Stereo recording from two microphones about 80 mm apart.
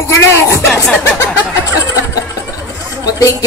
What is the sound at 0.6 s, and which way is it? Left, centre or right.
Music, centre.